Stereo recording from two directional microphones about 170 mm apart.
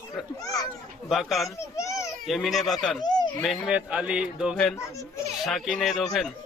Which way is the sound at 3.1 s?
25° left (ahead or behind).